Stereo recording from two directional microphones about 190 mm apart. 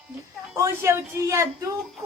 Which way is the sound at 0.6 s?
15° right (ahead or behind).